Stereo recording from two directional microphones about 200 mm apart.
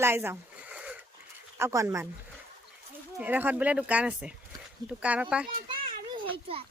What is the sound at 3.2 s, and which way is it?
Speech, 10° right (ahead or behind).